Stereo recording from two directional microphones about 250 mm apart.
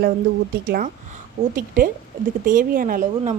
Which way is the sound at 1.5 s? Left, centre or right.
Right.